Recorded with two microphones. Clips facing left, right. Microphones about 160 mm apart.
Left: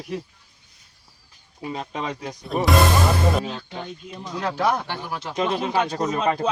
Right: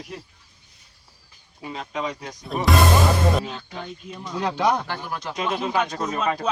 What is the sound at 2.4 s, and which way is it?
Speech, centre (ahead or behind).